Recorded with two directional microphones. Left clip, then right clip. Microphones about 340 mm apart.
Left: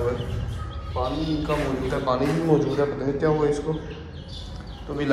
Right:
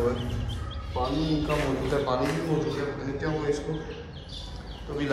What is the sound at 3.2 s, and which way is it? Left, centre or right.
Speech, centre.